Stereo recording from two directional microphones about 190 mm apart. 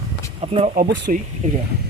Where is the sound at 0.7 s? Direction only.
60° right (ahead or behind).